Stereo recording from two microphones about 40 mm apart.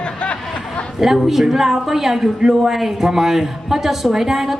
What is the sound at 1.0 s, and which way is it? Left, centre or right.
A woman's voice, centre.